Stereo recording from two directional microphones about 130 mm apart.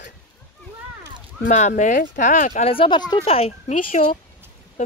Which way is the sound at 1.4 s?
80° left.